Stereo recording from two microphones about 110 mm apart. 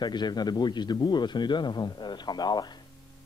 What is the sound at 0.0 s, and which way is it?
A man's voice, 40° left (ahead or behind).